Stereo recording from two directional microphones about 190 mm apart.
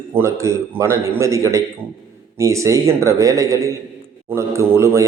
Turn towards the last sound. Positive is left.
turn(degrees=-15)  # may be behind; listen again after turning